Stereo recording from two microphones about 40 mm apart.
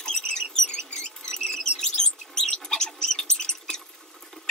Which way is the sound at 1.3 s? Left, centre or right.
Centre.